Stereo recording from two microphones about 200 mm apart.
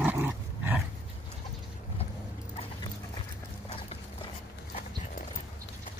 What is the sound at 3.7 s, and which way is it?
Clip-clop, 30° left (ahead or behind).